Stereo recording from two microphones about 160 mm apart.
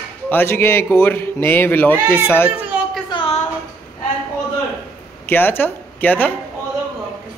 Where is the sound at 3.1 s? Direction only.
35° left (ahead or behind).